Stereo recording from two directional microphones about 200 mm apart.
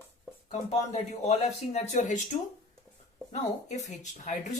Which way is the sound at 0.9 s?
35° left (ahead or behind).